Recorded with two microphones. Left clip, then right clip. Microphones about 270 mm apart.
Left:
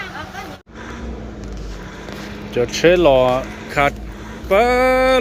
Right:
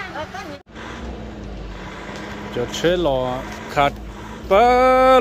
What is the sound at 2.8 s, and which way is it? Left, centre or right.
Speech, centre.